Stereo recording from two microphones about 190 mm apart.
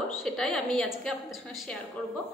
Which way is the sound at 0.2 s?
5° left (ahead or behind).